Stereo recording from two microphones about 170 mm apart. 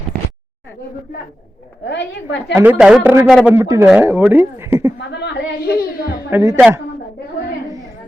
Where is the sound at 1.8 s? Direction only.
90° left.